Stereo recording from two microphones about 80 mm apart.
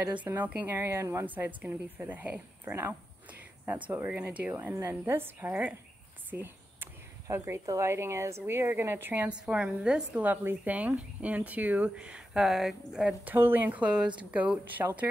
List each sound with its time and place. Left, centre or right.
0.0 s speech: right
0.7 s a woman's voice: right
1.2 s a woman's voice: right
6.3 s a sound: right
7.2 s a woman's voice: right
9.3 s speech: centre
10.2 s speech: right; by 13.1 s centre
13.2 s speech: right